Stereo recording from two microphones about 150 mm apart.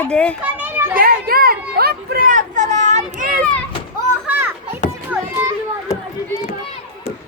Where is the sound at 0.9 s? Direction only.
80° right; by 3.4 s 65° right (ahead or behind).